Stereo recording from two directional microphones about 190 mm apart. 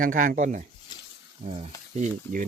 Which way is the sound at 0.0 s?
45° right (ahead or behind).